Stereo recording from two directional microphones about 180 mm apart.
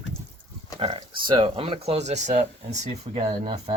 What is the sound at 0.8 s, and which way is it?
Speech, 30° right (ahead or behind).